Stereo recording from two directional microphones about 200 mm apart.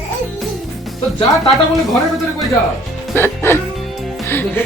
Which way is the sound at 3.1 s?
10° left (ahead or behind).